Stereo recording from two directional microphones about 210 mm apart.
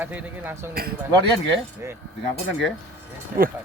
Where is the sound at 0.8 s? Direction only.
45° right (ahead or behind).